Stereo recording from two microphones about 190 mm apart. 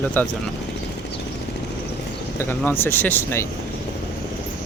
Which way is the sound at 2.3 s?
10° left (ahead or behind).